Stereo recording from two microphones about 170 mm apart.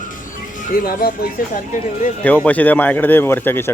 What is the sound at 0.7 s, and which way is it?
Speech, 60° left (ahead or behind).